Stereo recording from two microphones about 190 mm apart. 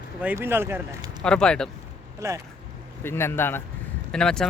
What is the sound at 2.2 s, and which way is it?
Speech, 15° right (ahead or behind).